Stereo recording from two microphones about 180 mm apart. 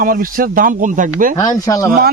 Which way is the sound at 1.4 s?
20° left (ahead or behind).